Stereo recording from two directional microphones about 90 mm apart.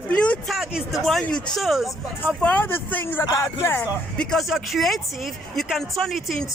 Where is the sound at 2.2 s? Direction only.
15° left (ahead or behind).